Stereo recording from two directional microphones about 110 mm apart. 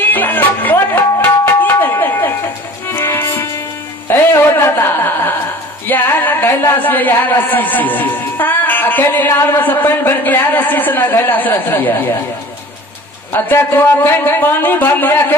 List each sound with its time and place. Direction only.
0.0 s music: 15° left (ahead or behind)
4.1 s a sound: 20° left (ahead or behind)
5.9 s music: 20° left (ahead or behind)
13.3 s a man's voice: 20° left (ahead or behind)